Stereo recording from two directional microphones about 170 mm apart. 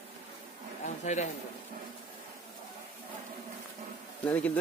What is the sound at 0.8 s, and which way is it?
Speech, 45° left (ahead or behind).